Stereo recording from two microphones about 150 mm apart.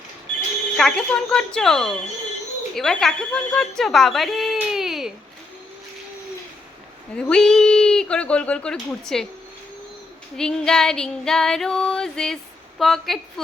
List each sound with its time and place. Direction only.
0.8 s speech: 5° left (ahead or behind)
7.2 s speech: 5° left (ahead or behind)
10.3 s speech: 5° left (ahead or behind)